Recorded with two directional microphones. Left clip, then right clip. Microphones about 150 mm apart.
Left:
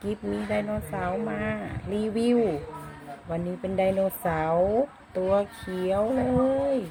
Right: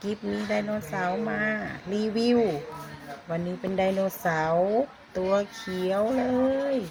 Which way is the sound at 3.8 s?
5° left (ahead or behind).